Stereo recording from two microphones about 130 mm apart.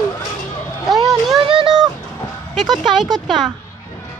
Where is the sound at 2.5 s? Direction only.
Centre (ahead or behind).